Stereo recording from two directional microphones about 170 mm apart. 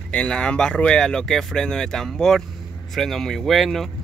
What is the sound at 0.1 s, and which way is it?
Speech, 5° left (ahead or behind).